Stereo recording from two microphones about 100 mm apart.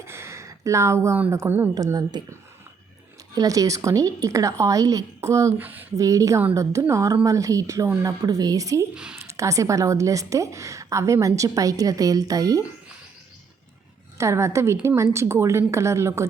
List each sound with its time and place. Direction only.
0.0 s a sound: 25° right (ahead or behind)
1.3 s a woman's voice: 25° right (ahead or behind)
1.7 s a woman's voice: 40° right (ahead or behind)
3.3 s a woman's voice: 35° right (ahead or behind)
5.5 s a woman's voice: 20° right (ahead or behind)
6.0 s a woman's voice: 35° right (ahead or behind)
14.2 s a woman's voice: 30° right (ahead or behind)